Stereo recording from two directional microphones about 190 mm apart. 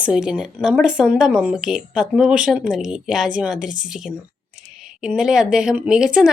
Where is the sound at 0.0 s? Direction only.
5° right (ahead or behind).